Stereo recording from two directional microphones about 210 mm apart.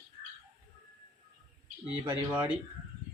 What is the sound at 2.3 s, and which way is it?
Speech, 10° right (ahead or behind).